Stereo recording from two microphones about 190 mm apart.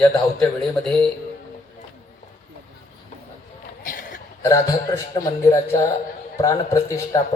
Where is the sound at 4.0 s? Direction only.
40° left (ahead or behind).